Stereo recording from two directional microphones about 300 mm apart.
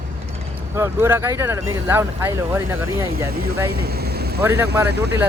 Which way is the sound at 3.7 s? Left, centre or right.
Right.